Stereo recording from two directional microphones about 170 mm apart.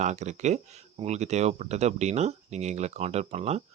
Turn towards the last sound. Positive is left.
turn(degrees=-40)  # may be behind; listen again after turning